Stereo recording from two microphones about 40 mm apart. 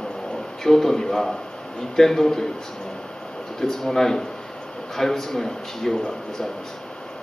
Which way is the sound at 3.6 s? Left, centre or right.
Centre.